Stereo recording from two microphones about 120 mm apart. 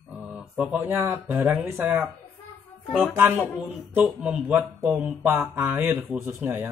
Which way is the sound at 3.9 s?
10° right (ahead or behind).